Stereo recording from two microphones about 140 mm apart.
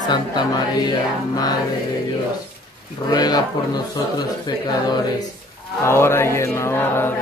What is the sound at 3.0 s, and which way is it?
Speech, 30° left (ahead or behind).